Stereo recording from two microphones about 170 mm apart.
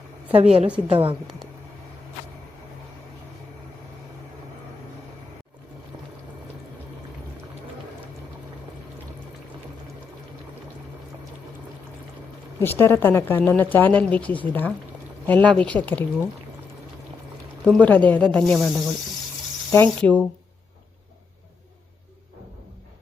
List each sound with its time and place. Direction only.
0.3 s a woman's voice: 40° right (ahead or behind)
12.5 s speech: 15° left (ahead or behind)
17.7 s speech: 10° left (ahead or behind)